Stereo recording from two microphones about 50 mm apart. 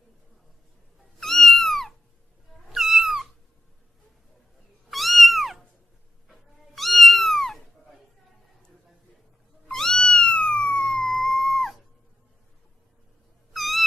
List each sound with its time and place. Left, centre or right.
1.2 s cat: centre
2.7 s cat: centre
4.9 s cat: centre
9.7 s cat: centre
10.1 s cat: left
10.6 s police car: centre
11.2 s music: centre
13.5 s cat: centre